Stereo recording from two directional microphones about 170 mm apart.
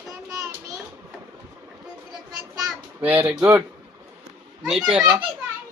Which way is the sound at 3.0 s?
10° right (ahead or behind).